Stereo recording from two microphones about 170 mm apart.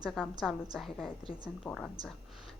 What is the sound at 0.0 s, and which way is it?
A woman's voice, 5° right (ahead or behind).